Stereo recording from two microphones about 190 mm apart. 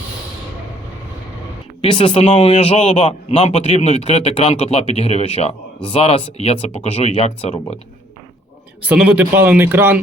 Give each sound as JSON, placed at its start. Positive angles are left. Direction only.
{"t": 1.8, "sound": "a man's voice", "side_deg": 25}
{"t": 8.8, "sound": "speech", "side_deg": -5}